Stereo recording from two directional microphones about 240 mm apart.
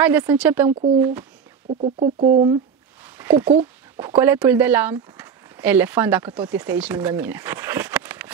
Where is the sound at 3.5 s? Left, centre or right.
Right.